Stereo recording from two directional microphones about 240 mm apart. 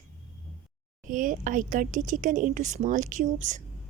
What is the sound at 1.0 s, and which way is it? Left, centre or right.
A woman's voice, right.